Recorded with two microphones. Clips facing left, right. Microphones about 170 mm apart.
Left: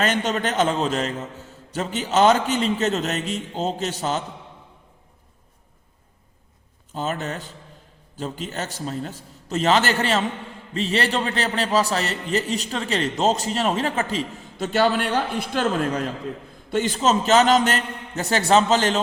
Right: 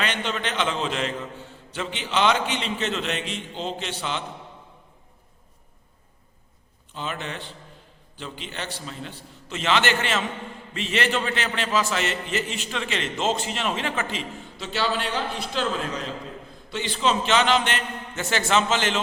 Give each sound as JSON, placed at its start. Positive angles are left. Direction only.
{"t": 0.0, "sound": "a man's voice", "side_deg": 45}
{"t": 6.9, "sound": "a man's voice", "side_deg": 40}